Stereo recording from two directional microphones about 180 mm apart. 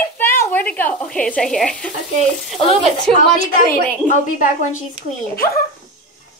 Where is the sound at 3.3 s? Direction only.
45° left (ahead or behind).